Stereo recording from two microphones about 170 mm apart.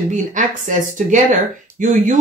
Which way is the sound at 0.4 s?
45° right (ahead or behind).